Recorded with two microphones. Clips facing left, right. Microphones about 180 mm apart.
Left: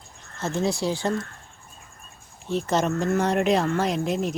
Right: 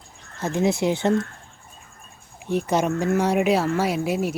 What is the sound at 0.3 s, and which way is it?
Speech, 15° right (ahead or behind).